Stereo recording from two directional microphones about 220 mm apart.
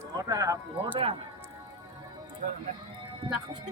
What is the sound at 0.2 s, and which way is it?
Speech, 15° right (ahead or behind).